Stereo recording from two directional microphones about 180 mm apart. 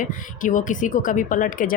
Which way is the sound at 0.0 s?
45° left (ahead or behind).